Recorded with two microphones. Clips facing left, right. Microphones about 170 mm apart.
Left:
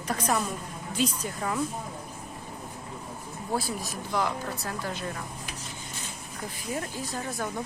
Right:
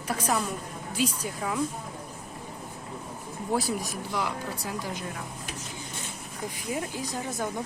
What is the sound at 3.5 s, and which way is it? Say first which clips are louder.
Speech: right 2 dB; 20° right (ahead or behind).